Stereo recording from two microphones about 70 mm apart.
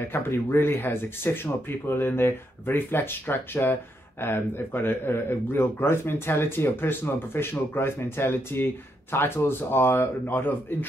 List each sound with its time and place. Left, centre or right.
0.0 s speech: left